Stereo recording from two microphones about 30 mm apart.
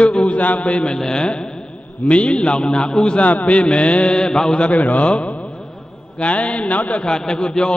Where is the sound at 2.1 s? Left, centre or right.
Left.